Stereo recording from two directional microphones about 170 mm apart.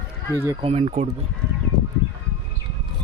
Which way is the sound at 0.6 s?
40° right (ahead or behind).